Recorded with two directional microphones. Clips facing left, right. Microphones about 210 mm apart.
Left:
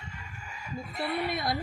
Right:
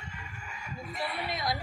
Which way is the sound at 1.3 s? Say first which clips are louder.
Left 2 dB; 55° left (ahead or behind).